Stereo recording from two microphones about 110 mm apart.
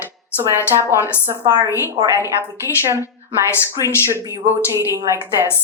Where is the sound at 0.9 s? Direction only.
20° right (ahead or behind).